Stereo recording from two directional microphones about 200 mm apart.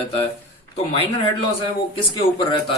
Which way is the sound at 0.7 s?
30° left (ahead or behind).